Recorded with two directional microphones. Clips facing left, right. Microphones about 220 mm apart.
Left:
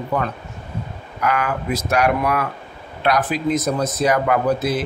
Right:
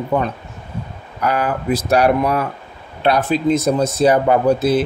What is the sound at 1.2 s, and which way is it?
Speech, 35° right (ahead or behind).